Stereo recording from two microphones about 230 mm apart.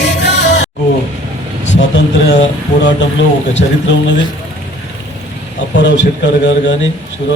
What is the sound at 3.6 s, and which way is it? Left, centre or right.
Speech, left.